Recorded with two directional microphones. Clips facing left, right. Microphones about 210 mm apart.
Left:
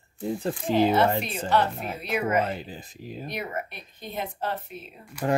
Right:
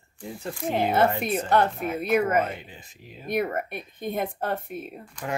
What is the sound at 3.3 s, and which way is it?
Speech, 55° right (ahead or behind).